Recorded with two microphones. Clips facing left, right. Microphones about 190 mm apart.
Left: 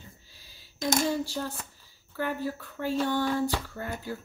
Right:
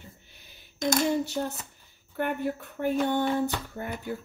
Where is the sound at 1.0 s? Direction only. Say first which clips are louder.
Right 2 dB; 20° right (ahead or behind).